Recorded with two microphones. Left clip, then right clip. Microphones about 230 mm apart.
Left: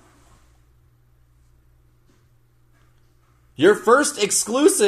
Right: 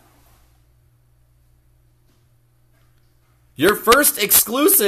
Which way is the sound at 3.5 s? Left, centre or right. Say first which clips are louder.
Right 1 dB; right.